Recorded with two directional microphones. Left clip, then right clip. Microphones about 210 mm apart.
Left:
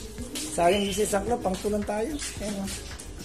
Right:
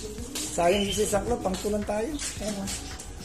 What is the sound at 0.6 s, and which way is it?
Speech, 15° left (ahead or behind).